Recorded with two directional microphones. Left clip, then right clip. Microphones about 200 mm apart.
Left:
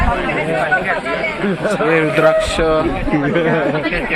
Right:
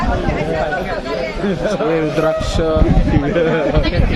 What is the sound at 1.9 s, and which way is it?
Speech, centre (ahead or behind).